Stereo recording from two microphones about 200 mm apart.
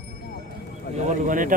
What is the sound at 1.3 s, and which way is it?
Speech, 40° right (ahead or behind).